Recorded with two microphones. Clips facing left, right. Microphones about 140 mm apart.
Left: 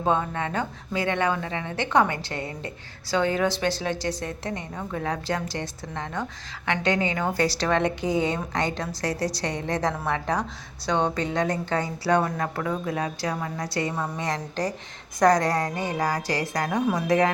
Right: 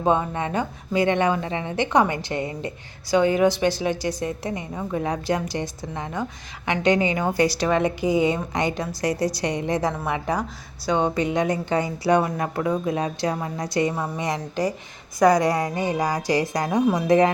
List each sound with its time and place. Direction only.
0.0 s a woman's voice: 15° right (ahead or behind)